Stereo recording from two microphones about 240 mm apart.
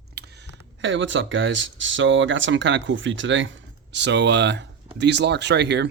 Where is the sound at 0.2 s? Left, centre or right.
Right.